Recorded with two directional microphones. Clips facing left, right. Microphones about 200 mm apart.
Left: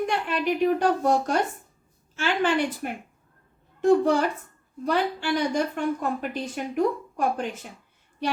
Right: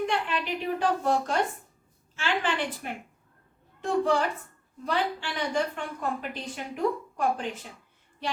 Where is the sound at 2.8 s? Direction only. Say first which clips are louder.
Left 5 dB; 50° left (ahead or behind).